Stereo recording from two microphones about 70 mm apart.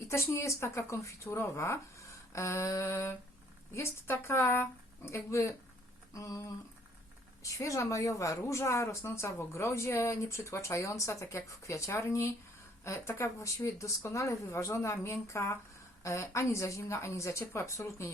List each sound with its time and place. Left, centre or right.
0.0 s a woman's voice: left